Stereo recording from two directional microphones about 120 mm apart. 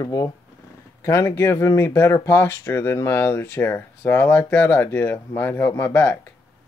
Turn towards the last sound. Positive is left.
turn(degrees=15)  # may be behind; listen again after turning